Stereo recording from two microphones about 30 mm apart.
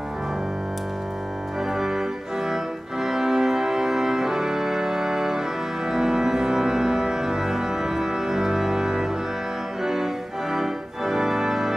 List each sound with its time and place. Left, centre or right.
1.7 s organ: centre
2.5 s music: centre
5.9 s organ: centre
10.5 s organ: centre